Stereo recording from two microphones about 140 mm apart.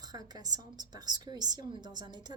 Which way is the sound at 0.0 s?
30° right (ahead or behind).